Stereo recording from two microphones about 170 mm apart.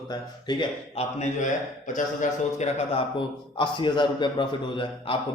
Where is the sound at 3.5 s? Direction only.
30° left (ahead or behind).